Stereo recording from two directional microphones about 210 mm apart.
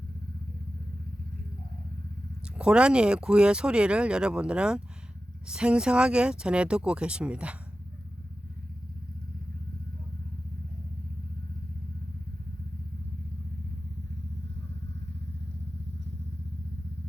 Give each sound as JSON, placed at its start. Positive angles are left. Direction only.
{"t": 2.6, "sound": "speech", "side_deg": -5}